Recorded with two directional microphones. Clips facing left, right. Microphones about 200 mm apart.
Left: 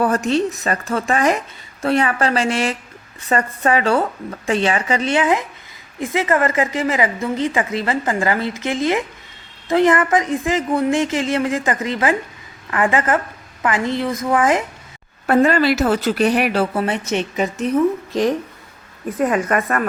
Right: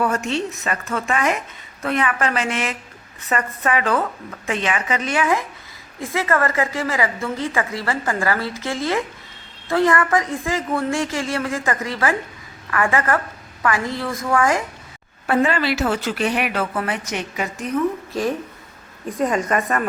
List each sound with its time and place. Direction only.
0.0 s a woman's voice: 35° left (ahead or behind)
15.3 s a woman's voice: 40° left (ahead or behind); by 17.7 s 20° left (ahead or behind)
19.0 s a woman's voice: 5° left (ahead or behind)